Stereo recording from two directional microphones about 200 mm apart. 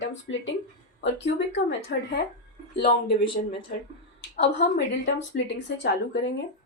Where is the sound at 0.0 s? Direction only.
70° left (ahead or behind).